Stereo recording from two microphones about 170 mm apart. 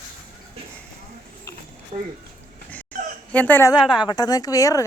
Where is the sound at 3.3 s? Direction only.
10° left (ahead or behind).